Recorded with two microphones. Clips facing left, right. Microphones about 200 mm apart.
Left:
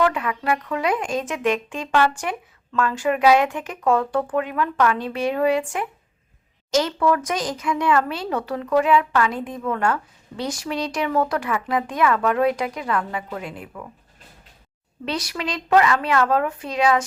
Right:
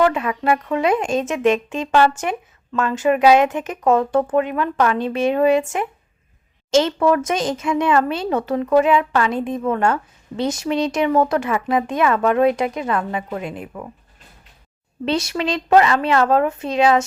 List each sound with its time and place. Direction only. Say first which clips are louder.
0.0 s speech: right 4 dB; 25° right (ahead or behind)
15.0 s speech: right 6 dB; 25° right (ahead or behind)